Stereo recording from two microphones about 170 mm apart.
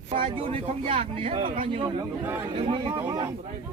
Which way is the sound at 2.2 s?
15° right (ahead or behind).